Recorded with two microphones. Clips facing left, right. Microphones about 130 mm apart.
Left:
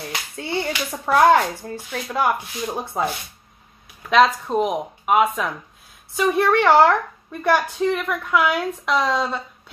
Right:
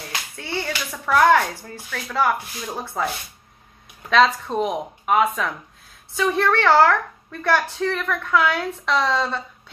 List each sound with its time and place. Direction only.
0.4 s a sound: 25° left (ahead or behind)
0.9 s a woman's voice: 25° left (ahead or behind)
4.1 s a woman's voice: 10° left (ahead or behind)